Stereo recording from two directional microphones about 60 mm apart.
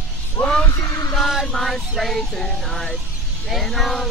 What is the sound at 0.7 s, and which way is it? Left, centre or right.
Music, left.